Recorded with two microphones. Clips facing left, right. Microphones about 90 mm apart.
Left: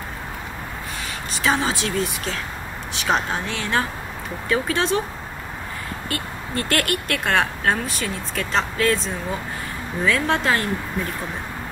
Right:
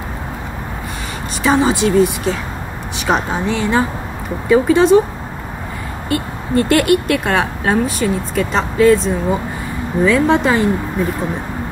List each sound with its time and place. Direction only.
1.4 s speech: centre (ahead or behind)
6.0 s speech: centre (ahead or behind)